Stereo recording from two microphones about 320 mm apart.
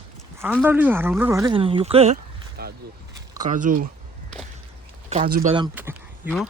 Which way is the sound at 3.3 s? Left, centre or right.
Right.